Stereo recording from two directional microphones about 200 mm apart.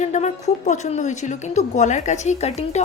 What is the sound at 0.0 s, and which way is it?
A woman's voice, 35° left (ahead or behind).